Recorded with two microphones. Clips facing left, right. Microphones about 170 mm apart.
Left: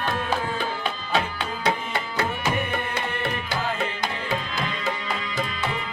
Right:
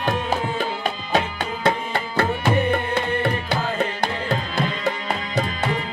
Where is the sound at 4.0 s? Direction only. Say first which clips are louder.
Right 4 dB; 60° right (ahead or behind).